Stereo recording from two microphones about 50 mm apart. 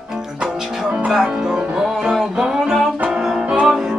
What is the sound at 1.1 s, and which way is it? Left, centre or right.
Music, centre.